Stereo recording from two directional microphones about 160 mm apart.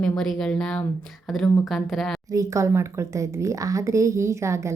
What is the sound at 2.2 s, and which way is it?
Speech, 20° right (ahead or behind).